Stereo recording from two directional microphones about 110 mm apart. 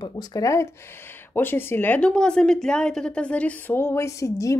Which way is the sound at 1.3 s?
20° left (ahead or behind).